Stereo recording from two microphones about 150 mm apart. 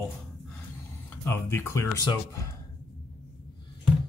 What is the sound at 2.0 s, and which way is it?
Speech, 30° left (ahead or behind).